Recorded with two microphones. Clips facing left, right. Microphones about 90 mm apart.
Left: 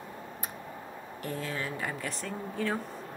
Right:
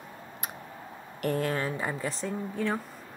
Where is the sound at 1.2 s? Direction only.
65° right (ahead or behind).